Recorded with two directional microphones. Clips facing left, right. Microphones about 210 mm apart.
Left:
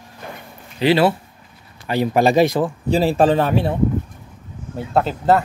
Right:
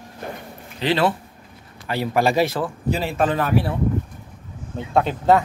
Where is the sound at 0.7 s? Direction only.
10° left (ahead or behind).